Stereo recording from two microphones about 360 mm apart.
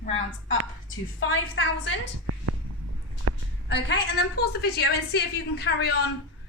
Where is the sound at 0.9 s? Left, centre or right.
Left.